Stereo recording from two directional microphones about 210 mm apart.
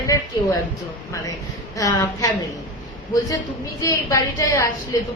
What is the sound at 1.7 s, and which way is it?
Speech, 15° left (ahead or behind).